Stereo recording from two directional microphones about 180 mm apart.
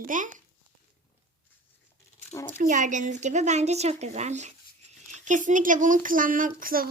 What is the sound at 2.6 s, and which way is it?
A woman's voice, 45° right (ahead or behind).